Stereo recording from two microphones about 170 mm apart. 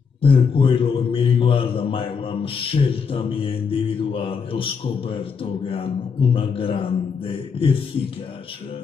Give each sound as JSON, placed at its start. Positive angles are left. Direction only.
{"t": 0.2, "sound": "a man's voice", "side_deg": 35}